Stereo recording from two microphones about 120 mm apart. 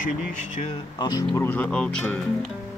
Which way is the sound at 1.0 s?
35° left (ahead or behind).